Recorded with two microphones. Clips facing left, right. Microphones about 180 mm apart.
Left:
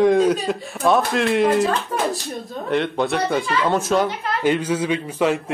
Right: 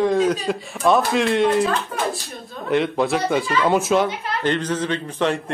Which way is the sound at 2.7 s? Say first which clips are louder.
Right 1 dB; centre (ahead or behind).